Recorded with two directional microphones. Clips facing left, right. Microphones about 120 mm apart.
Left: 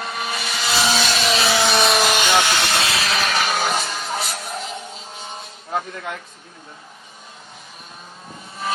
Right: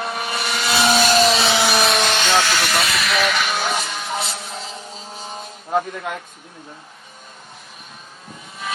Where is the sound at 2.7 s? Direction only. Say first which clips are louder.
Right 1 dB; 30° left (ahead or behind).